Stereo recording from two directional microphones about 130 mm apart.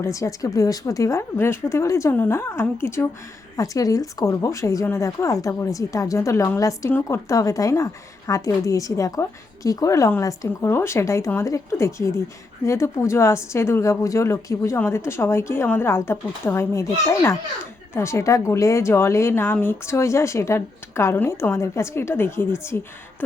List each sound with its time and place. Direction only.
0.0 s a woman's voice: 25° left (ahead or behind)